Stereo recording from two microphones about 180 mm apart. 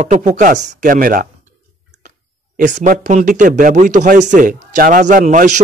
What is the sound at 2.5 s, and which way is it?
Speech, 45° right (ahead or behind).